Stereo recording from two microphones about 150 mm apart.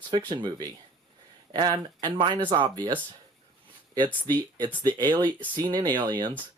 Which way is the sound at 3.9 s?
30° right (ahead or behind).